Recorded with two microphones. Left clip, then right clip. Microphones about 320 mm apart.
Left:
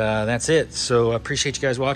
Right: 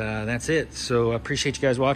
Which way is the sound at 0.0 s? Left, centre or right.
Centre.